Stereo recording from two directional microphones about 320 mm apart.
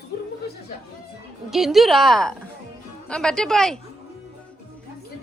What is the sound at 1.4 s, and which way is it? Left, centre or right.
A woman's voice, centre.